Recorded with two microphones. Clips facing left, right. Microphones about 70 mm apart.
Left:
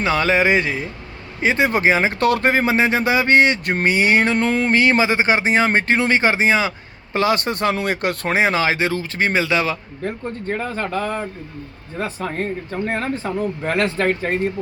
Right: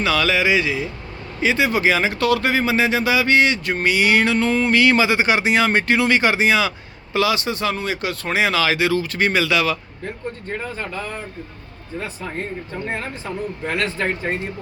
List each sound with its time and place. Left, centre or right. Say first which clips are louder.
0.0 s speech: left 2 dB; left
4.8 s speech: right 1 dB; left
10.6 s speech: left 7 dB; left